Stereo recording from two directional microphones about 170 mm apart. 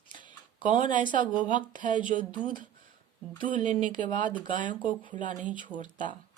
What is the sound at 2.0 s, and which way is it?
Speech, 50° right (ahead or behind).